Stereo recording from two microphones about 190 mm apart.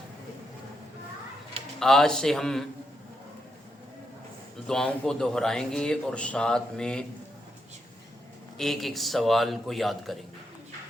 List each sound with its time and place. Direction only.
1.8 s speech: centre (ahead or behind)
4.6 s speech: 5° left (ahead or behind)
8.5 s speech: centre (ahead or behind)